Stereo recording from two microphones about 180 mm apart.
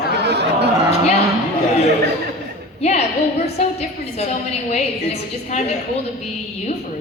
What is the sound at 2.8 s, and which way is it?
Speech, 35° left (ahead or behind).